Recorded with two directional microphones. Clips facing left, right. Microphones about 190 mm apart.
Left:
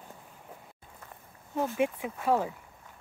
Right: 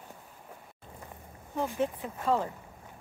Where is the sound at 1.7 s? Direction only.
10° left (ahead or behind).